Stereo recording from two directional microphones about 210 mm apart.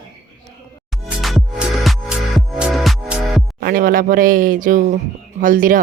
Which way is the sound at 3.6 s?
45° right (ahead or behind).